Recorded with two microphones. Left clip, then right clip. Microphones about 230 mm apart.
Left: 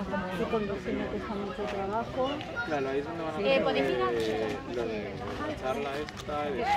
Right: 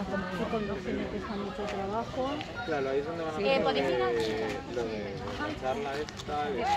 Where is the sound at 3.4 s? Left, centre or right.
Centre.